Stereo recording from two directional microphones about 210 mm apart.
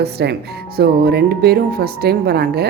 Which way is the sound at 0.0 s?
50° right (ahead or behind).